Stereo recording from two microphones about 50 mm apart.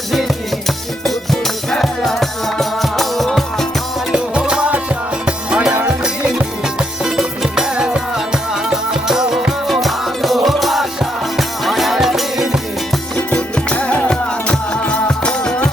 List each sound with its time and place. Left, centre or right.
1.0 s music: centre
4.1 s music: centre
6.7 s music: centre
13.1 s music: left